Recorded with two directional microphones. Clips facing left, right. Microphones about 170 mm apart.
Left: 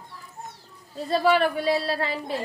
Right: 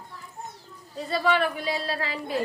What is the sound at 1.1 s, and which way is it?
Speech, 35° left (ahead or behind).